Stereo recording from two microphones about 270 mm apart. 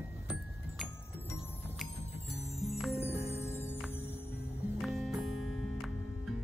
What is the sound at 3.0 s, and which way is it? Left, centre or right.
Music, left.